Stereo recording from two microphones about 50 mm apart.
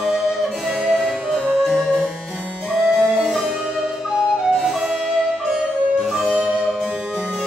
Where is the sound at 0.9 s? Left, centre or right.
Centre.